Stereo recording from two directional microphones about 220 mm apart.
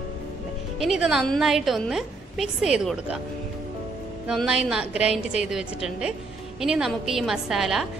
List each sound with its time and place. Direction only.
0.7 s a woman's voice: 5° right (ahead or behind)
4.3 s a woman's voice: centre (ahead or behind)